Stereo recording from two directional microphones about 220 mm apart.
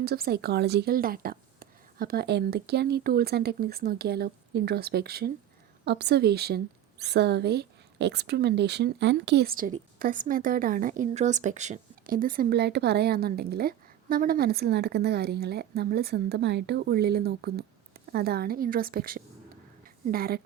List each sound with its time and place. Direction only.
0.0 s a woman's voice: 45° right (ahead or behind)